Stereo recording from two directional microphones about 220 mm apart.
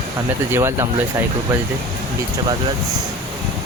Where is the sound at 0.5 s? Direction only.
10° right (ahead or behind).